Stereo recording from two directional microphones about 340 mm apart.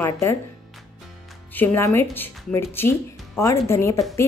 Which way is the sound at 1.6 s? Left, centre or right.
Centre.